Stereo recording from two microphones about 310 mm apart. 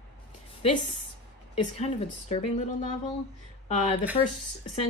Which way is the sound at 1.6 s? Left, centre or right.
Left.